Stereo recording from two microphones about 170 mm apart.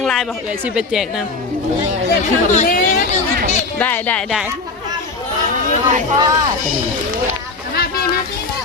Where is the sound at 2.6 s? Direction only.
55° left (ahead or behind).